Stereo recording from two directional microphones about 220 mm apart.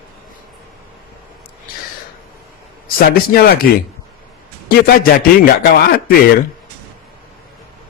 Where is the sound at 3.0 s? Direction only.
45° left (ahead or behind).